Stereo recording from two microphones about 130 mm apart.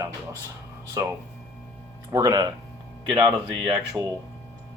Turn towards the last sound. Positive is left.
turn(degrees=-10)  # may be behind; listen again after turning